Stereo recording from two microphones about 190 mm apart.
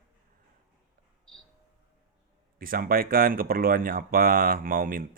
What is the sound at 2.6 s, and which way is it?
Speech, 50° right (ahead or behind).